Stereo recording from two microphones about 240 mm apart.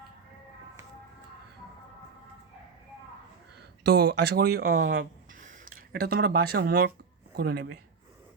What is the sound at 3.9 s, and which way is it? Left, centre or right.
A man's voice, right.